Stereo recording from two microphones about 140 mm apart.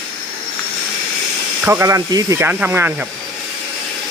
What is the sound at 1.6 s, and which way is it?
Speech, 20° right (ahead or behind).